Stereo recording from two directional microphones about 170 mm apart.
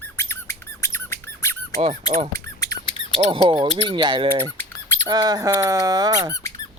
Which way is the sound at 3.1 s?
35° right (ahead or behind).